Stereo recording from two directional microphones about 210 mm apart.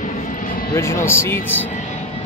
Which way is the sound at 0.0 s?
40° left (ahead or behind).